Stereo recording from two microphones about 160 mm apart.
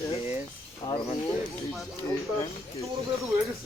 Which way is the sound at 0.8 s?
35° left (ahead or behind).